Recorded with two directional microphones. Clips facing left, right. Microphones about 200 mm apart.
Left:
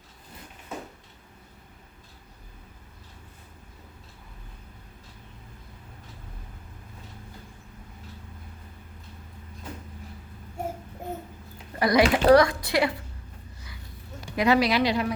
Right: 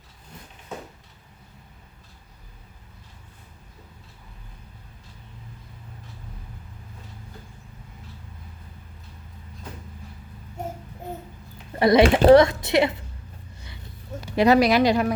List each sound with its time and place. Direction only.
11.8 s speech: 25° right (ahead or behind)
14.3 s speech: 40° right (ahead or behind)